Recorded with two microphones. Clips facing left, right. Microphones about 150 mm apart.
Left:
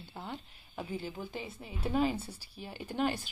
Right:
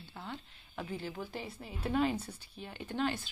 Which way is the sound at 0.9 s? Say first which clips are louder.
Left 2 dB; centre (ahead or behind).